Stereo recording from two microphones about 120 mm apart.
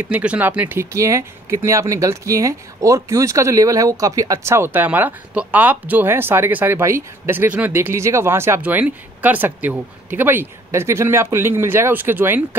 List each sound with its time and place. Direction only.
0.0 s speech: 10° right (ahead or behind)